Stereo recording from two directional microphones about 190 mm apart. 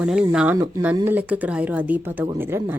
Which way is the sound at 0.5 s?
20° right (ahead or behind).